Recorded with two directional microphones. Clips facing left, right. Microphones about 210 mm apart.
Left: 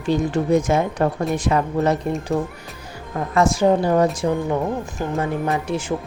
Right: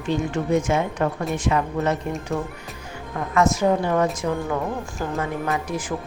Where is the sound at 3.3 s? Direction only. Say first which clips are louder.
Left 3 dB; 30° left (ahead or behind).